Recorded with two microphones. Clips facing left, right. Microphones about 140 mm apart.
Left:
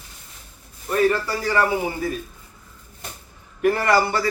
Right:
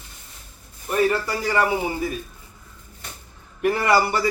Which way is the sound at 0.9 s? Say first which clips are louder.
Left 1 dB; 15° right (ahead or behind).